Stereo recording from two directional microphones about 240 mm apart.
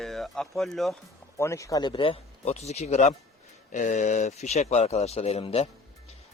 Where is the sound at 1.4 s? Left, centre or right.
Centre.